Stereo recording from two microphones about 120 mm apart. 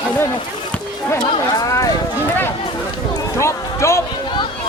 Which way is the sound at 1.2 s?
30° left (ahead or behind).